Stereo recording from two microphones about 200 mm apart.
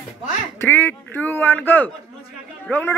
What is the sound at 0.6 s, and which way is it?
Speech, 10° left (ahead or behind).